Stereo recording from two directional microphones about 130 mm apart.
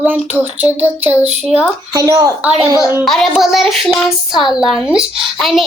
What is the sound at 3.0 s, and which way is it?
A child's voice, centre (ahead or behind).